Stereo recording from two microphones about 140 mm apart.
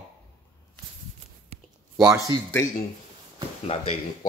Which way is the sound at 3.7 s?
45° left (ahead or behind).